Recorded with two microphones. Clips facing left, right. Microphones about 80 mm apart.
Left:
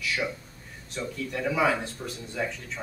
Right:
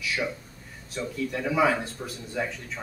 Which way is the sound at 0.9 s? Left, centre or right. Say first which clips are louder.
Right 2 dB; centre.